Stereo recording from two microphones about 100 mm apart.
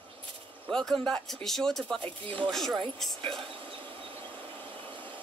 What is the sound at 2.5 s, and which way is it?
Speech, 5° left (ahead or behind).